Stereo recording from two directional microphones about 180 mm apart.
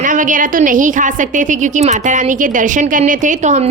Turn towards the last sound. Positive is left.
turn(degrees=-40)  # may be behind; listen again after turning